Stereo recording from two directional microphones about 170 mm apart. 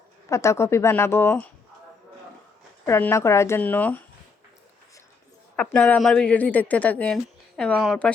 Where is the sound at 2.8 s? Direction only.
15° left (ahead or behind).